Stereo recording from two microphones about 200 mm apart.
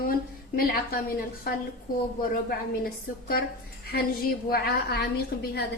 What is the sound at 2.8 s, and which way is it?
Speech, 50° left (ahead or behind).